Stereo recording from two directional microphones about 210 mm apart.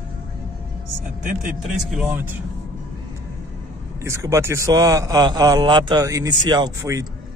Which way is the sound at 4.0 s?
15° right (ahead or behind).